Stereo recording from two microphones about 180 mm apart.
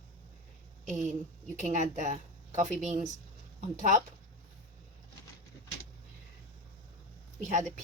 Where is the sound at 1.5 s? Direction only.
45° right (ahead or behind).